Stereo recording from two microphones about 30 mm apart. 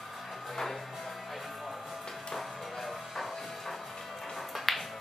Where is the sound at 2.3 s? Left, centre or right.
Centre.